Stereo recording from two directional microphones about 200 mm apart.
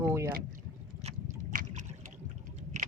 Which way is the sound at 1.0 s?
40° right (ahead or behind).